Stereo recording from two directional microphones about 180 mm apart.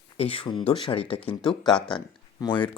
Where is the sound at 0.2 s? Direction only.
30° left (ahead or behind).